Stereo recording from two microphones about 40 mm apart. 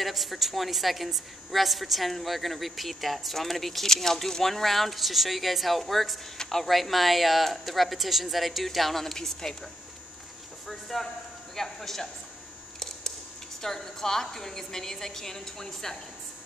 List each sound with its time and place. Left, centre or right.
0.0 s a woman's voice: centre
6.3 s speech: centre
6.6 s a woman's voice: centre
10.7 s a woman's voice: centre
12.7 s a sound: centre
13.6 s a woman's voice: centre